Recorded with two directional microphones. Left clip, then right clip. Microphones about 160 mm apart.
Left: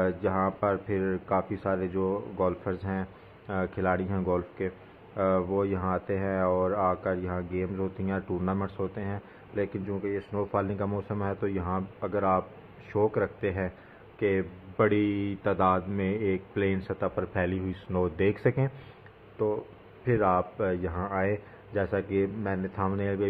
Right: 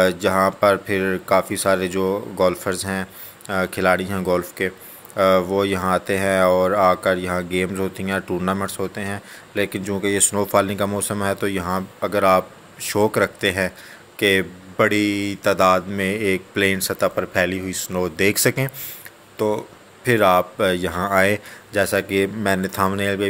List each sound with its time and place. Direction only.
0.0 s speech: 25° right (ahead or behind)